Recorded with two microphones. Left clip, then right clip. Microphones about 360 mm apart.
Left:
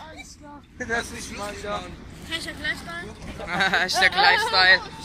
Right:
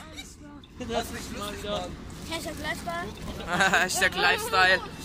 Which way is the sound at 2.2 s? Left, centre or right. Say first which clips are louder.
Left 4 dB; centre.